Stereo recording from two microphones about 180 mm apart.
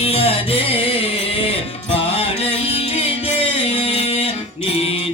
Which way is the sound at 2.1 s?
35° left (ahead or behind).